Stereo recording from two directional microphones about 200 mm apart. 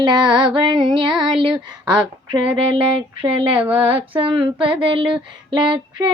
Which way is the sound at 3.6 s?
10° right (ahead or behind).